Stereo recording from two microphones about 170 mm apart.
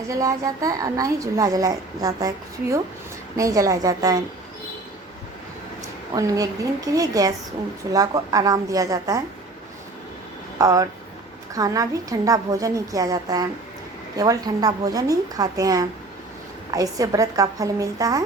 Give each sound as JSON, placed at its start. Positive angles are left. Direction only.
{"t": 0.1, "sound": "a woman's voice", "side_deg": -20}
{"t": 6.1, "sound": "a woman's voice", "side_deg": -20}
{"t": 10.6, "sound": "a woman's voice", "side_deg": -20}